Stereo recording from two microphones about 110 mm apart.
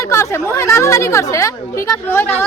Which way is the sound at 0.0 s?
25° left (ahead or behind).